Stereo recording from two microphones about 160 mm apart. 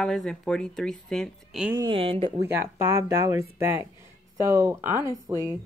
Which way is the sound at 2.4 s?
15° right (ahead or behind).